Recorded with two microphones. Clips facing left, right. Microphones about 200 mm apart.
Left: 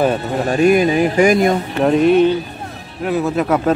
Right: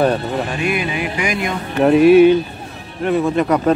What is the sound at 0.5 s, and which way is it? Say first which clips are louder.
Speech: left 8 dB; 40° left (ahead or behind).